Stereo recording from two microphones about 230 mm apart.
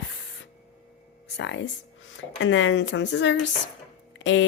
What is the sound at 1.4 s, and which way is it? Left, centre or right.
A woman's voice, left.